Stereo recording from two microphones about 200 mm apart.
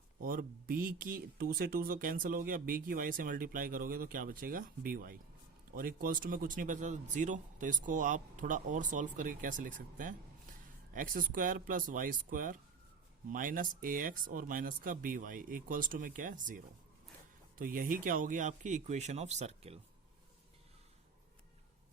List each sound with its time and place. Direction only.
0.2 s speech: 45° right (ahead or behind)